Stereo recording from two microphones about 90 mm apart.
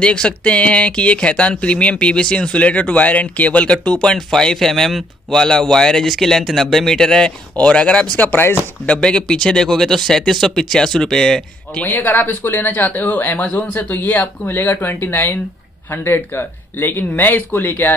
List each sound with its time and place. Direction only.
0.0 s speech: 10° left (ahead or behind); by 8.6 s 25° left (ahead or behind)
8.8 s speech: 10° left (ahead or behind)
11.8 s speech: 20° left (ahead or behind)